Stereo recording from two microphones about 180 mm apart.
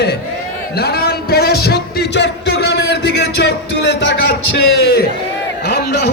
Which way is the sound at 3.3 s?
75° left (ahead or behind).